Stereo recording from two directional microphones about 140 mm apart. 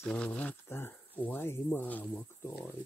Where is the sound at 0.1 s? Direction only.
10° left (ahead or behind).